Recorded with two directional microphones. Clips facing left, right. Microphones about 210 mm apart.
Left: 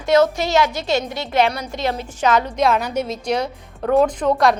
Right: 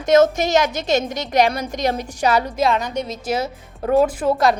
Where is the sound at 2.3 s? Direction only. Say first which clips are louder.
Left 1 dB; centre (ahead or behind).